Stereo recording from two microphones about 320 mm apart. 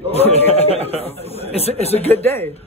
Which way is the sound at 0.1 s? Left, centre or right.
Centre.